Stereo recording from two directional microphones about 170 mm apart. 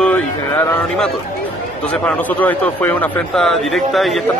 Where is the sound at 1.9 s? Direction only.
10° left (ahead or behind).